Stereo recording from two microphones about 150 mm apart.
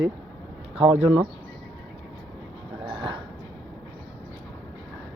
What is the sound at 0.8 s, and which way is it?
Speech, 40° right (ahead or behind).